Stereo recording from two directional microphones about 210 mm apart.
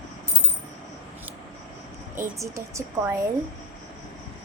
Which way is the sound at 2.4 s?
15° right (ahead or behind).